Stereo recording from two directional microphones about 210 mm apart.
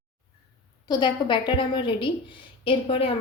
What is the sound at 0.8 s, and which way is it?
A woman's voice, 20° left (ahead or behind).